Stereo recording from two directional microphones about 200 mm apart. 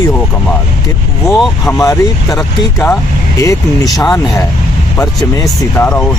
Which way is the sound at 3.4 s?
15° left (ahead or behind).